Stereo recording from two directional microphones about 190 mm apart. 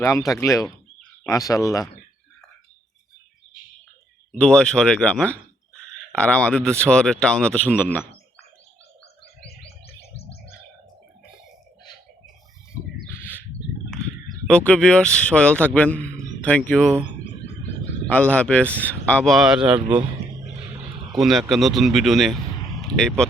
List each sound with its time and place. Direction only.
0.0 s speech: 15° left (ahead or behind)
4.3 s speech: 5° left (ahead or behind)
9.6 s music: 30° left (ahead or behind)
13.1 s bird: 10° left (ahead or behind)
14.4 s a man's voice: 5° left (ahead or behind)
18.1 s speech: 5° left (ahead or behind)
21.1 s a man's voice: centre (ahead or behind)